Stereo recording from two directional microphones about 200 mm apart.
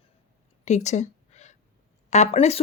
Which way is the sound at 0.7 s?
35° left (ahead or behind).